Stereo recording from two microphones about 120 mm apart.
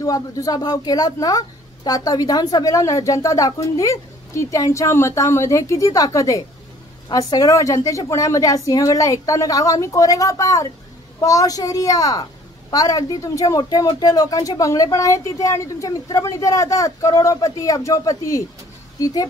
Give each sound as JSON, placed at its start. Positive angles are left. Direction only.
{"t": 0.0, "sound": "speech", "side_deg": 30}